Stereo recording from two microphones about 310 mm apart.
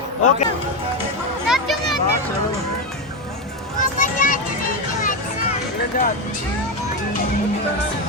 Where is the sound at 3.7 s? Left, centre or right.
Left.